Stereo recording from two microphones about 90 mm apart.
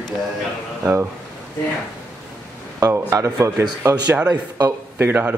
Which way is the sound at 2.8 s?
35° right (ahead or behind).